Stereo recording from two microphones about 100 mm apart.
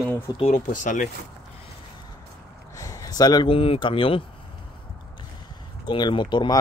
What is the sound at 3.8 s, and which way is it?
Speech, 60° left (ahead or behind).